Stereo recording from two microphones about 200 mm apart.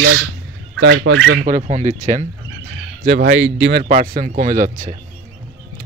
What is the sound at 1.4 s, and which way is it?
Speech, 40° right (ahead or behind).